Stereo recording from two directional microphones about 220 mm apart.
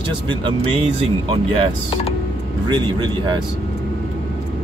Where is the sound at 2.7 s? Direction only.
20° right (ahead or behind).